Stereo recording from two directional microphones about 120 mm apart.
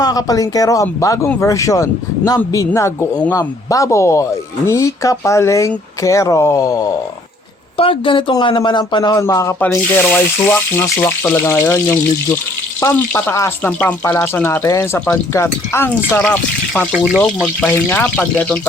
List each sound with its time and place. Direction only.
0.0 s speech: 30° left (ahead or behind)
7.8 s speech: 45° left (ahead or behind); by 9.6 s 25° left (ahead or behind)
9.6 s speech: 15° left (ahead or behind)
17.1 s speech: centre (ahead or behind)
17.7 s speech: 15° left (ahead or behind)